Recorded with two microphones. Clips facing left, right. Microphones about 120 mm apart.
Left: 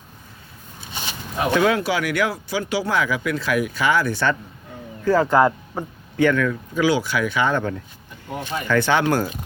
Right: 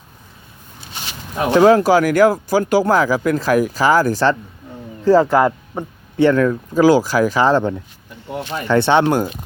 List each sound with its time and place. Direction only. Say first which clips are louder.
1.5 s speech: right 8 dB; 30° right (ahead or behind)
5.3 s speech: right 2 dB; 15° right (ahead or behind)
6.1 s speech: right 5 dB; 35° right (ahead or behind)